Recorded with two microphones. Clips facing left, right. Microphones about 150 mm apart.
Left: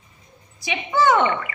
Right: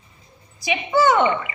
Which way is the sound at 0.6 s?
10° right (ahead or behind).